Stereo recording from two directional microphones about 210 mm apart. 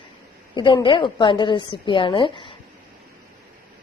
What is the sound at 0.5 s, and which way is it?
A woman's voice, 20° left (ahead or behind).